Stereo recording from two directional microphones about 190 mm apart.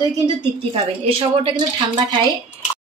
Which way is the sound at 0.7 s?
30° right (ahead or behind).